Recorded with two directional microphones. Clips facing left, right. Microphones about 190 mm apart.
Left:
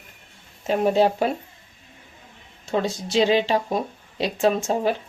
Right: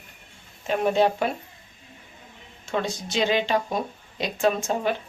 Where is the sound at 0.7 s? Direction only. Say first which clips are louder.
Left 2 dB; 35° left (ahead or behind).